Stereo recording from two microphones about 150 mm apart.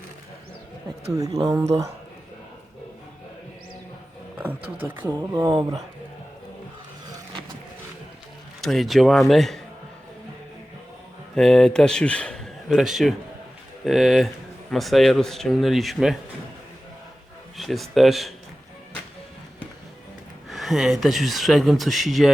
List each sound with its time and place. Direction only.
1.1 s speech: 25° right (ahead or behind)
4.4 s speech: 10° right (ahead or behind)
8.6 s speech: centre (ahead or behind)
11.3 s speech: 5° left (ahead or behind)
17.6 s speech: centre (ahead or behind)
20.5 s speech: centre (ahead or behind)